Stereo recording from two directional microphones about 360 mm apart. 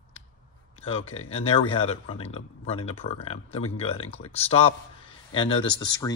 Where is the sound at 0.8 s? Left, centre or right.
Centre.